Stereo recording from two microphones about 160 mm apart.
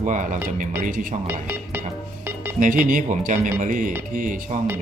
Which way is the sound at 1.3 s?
10° right (ahead or behind).